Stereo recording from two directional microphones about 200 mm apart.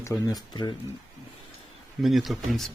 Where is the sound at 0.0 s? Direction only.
15° left (ahead or behind).